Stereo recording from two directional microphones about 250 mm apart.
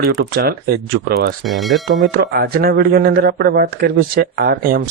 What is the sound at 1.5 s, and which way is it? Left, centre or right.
Speech, centre.